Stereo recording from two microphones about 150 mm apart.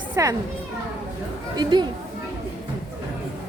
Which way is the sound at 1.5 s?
30° right (ahead or behind).